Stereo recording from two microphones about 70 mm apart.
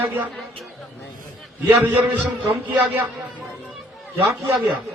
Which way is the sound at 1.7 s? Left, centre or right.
Right.